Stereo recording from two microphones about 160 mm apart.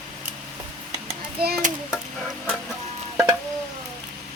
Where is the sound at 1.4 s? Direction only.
80° right.